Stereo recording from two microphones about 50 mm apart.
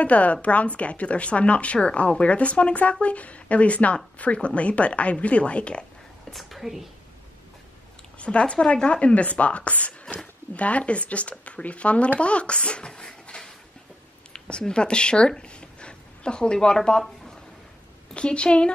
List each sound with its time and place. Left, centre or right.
0.0 s a woman's voice: left
6.3 s a woman's voice: centre
8.2 s a woman's voice: left
18.1 s a woman's voice: left